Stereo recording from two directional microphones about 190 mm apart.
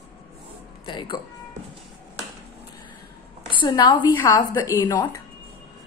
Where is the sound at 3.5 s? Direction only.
25° left (ahead or behind).